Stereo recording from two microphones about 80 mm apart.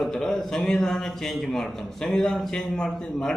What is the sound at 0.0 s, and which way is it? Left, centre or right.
A man's voice, centre.